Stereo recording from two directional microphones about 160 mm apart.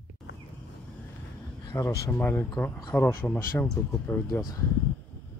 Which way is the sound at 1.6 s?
20° left (ahead or behind).